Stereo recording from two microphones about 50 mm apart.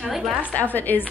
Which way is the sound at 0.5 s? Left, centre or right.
Left.